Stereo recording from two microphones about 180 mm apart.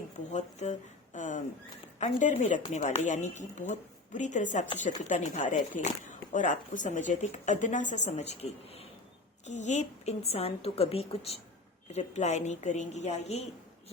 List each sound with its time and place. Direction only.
0.3 s a woman's voice: 40° left (ahead or behind)